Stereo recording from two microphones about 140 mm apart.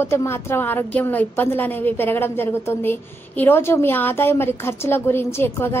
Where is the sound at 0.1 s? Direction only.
20° left (ahead or behind).